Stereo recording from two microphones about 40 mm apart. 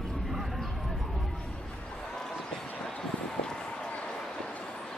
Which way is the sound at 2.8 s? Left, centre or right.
Centre.